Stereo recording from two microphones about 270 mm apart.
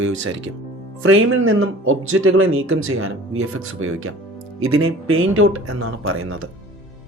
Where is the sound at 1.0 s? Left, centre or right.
Right.